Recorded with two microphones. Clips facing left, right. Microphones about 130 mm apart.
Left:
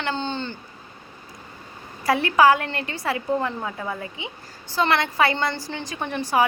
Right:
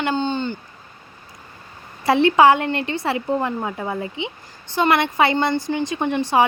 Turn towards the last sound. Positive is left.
turn(degrees=-25)  # may be behind; listen again after turning